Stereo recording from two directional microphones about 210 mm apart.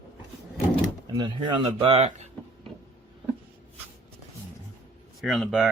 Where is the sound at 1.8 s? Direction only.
25° right (ahead or behind).